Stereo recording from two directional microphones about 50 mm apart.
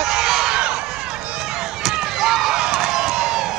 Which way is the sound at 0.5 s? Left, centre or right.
Centre.